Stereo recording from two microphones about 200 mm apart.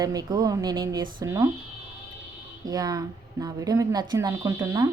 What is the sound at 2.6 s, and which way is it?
Speech, 20° right (ahead or behind).